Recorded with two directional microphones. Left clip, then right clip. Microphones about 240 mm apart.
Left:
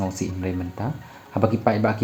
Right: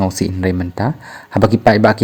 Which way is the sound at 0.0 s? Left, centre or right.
Right.